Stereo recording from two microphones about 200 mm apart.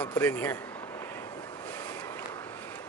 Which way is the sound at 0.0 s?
10° left (ahead or behind).